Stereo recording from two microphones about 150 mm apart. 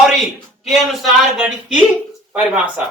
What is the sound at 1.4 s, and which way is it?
A man's voice, 5° right (ahead or behind).